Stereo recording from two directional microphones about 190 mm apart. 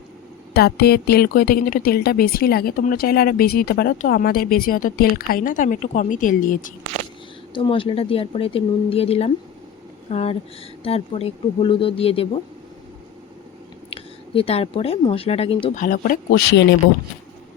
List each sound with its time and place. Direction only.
0.5 s a woman's voice: 55° left (ahead or behind)
7.5 s speech: 25° left (ahead or behind)
13.9 s speech: 30° left (ahead or behind)
15.8 s a woman's voice: 45° left (ahead or behind); by 16.7 s 65° left (ahead or behind)